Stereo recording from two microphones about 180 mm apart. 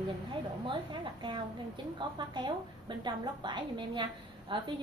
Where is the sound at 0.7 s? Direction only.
25° right (ahead or behind).